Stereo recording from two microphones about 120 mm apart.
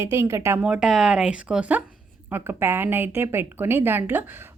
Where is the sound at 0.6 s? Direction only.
5° right (ahead or behind).